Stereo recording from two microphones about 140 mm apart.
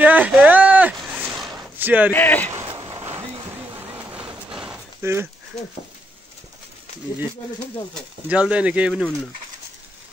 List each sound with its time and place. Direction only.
0.0 s a sound: 10° right (ahead or behind)
1.2 s zipper: centre (ahead or behind)
1.8 s speech: 10° right (ahead or behind)
2.1 s speech: 10° left (ahead or behind)
2.7 s a sound: 30° right (ahead or behind)
3.8 s vehicle: 15° right (ahead or behind)
5.0 s speech: 15° right (ahead or behind)
8.3 s speech: 10° right (ahead or behind)